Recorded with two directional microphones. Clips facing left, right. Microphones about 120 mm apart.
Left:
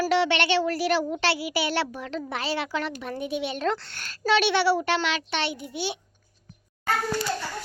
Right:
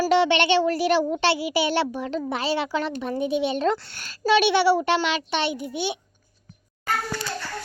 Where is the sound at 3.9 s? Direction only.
10° right (ahead or behind).